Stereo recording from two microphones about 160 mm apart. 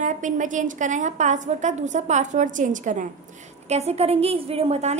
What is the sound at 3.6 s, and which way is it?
A woman's voice, 40° right (ahead or behind).